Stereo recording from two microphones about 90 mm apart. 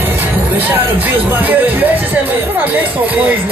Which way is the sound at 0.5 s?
20° right (ahead or behind).